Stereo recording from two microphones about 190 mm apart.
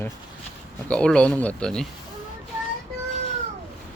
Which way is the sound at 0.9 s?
5° left (ahead or behind).